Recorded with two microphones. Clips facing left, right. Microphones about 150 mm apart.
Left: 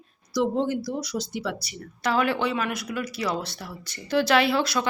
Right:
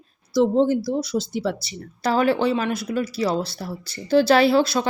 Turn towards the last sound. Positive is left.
turn(degrees=-30)  # may be behind; listen again after turning